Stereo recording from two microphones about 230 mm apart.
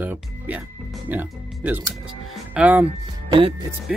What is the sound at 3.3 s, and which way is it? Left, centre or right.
Speech, right.